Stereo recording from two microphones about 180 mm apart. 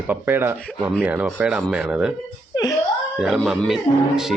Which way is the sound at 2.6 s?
20° left (ahead or behind).